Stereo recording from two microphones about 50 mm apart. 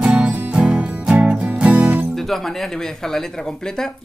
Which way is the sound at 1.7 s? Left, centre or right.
Right.